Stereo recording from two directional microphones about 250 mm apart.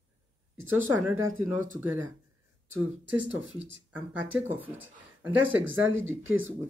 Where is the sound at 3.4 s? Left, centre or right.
Right.